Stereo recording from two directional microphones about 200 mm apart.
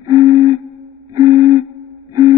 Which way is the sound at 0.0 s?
15° right (ahead or behind).